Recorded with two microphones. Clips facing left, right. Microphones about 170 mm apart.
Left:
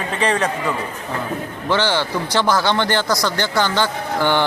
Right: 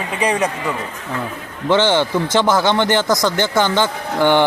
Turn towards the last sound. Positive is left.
turn(degrees=-15)  # may be behind; listen again after turning